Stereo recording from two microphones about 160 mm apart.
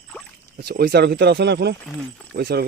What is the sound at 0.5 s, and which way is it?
Speech, 80° right.